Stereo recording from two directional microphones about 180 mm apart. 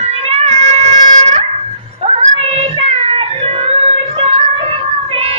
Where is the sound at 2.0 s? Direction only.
35° right (ahead or behind).